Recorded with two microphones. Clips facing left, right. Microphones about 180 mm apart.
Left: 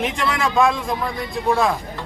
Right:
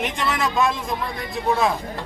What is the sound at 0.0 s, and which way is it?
A man's voice, centre (ahead or behind).